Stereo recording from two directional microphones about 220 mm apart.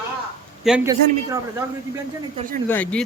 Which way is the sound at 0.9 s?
15° right (ahead or behind).